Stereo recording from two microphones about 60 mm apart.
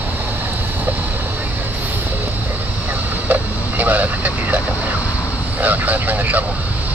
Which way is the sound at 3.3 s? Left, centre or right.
Right.